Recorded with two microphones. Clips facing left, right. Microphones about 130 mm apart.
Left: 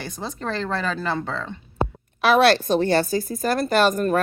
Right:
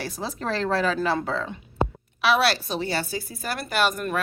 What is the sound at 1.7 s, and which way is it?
A woman's voice, 45° left (ahead or behind).